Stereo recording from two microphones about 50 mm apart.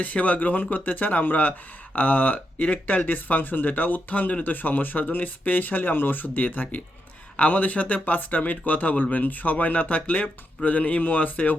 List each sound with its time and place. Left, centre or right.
0.0 s speech: left